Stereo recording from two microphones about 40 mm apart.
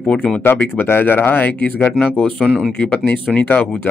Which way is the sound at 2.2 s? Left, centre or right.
Left.